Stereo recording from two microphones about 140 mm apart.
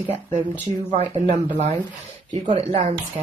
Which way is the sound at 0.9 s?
50° right (ahead or behind).